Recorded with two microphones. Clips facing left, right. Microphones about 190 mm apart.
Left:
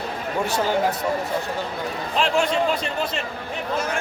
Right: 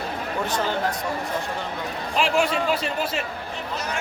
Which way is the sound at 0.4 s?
10° left (ahead or behind).